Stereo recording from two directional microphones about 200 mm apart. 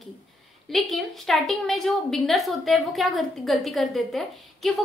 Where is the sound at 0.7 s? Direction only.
Centre (ahead or behind).